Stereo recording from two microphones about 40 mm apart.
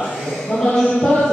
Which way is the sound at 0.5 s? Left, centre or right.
Left.